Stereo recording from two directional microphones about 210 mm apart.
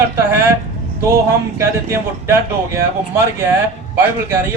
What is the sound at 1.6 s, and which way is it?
Speech, 10° right (ahead or behind).